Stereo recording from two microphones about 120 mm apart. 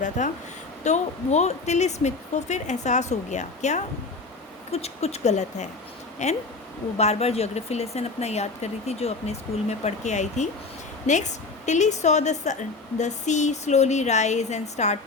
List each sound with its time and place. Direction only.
0.2 s a woman's voice: 90° left
0.9 s speech: 75° left (ahead or behind)
4.7 s speech: 60° left (ahead or behind)
6.9 s a woman's voice: 65° left (ahead or behind)